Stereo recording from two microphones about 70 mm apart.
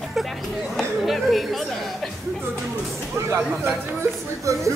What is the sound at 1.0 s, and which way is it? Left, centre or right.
Speech, centre.